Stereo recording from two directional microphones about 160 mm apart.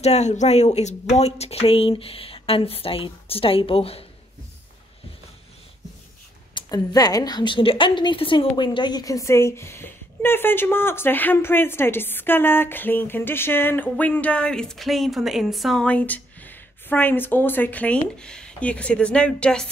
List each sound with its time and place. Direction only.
0.0 s speech: 45° left (ahead or behind)
6.5 s a woman's voice: 25° left (ahead or behind); by 19.7 s 5° left (ahead or behind)